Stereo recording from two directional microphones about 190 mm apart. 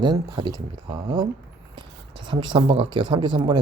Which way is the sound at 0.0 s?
20° right (ahead or behind).